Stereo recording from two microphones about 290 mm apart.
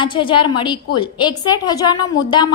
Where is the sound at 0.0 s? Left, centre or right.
Centre.